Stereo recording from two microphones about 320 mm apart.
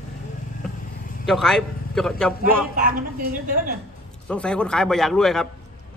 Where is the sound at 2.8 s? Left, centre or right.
Right.